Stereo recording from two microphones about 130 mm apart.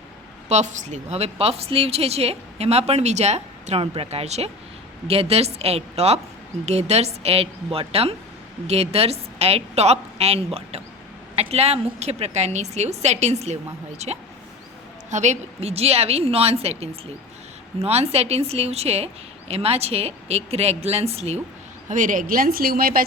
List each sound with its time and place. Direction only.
0.4 s a woman's voice: 65° right (ahead or behind)
21.8 s speech: 90° right